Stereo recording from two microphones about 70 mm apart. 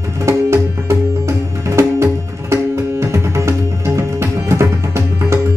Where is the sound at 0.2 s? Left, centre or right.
Right.